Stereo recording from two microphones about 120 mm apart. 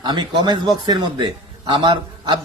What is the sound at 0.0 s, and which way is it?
A man's voice, 40° right (ahead or behind).